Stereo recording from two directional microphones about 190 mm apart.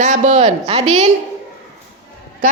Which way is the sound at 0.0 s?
40° right (ahead or behind).